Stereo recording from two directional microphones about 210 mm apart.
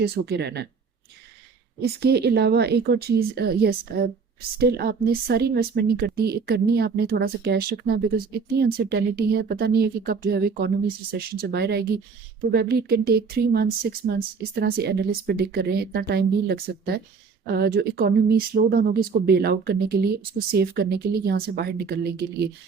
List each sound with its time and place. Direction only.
0.0 s a woman's voice: 50° right (ahead or behind)
1.8 s a woman's voice: 50° right (ahead or behind)